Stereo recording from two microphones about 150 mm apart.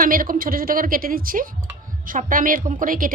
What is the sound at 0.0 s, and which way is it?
A woman's voice, 70° right (ahead or behind).